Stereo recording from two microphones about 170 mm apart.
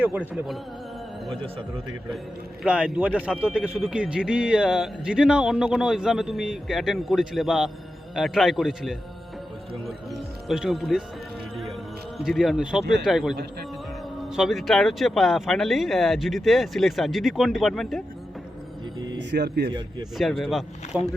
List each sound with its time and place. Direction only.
0.0 s speech: 10° right (ahead or behind)
2.6 s a man's voice: 5° right (ahead or behind)
12.1 s a man's voice: centre (ahead or behind)
13.3 s speech: 65° right (ahead or behind)
14.3 s a man's voice: centre (ahead or behind)
18.9 s a sound: 25° right (ahead or behind)
19.3 s speech: 80° right
20.1 s a man's voice: centre (ahead or behind)